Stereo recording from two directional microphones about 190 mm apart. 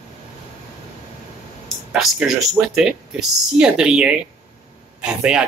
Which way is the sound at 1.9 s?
Centre (ahead or behind).